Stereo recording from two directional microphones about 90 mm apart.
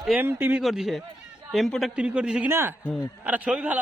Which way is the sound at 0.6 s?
Centre (ahead or behind).